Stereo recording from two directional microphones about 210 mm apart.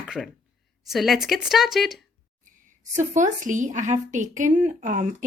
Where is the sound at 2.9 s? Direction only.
35° right (ahead or behind).